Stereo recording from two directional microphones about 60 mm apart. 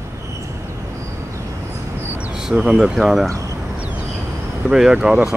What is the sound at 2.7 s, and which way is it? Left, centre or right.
Speech, centre.